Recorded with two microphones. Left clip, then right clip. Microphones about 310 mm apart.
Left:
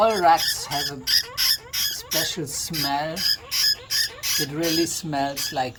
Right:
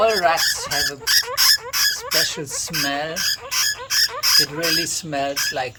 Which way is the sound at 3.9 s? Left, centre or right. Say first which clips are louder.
Right 7 dB; centre.